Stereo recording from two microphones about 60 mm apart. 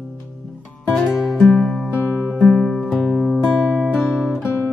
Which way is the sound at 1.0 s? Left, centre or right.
Centre.